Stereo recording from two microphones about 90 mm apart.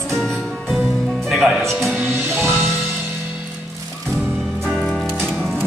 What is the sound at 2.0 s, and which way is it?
Music, 30° right (ahead or behind).